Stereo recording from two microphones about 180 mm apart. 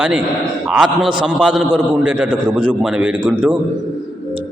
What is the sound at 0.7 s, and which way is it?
A man's voice, 5° right (ahead or behind).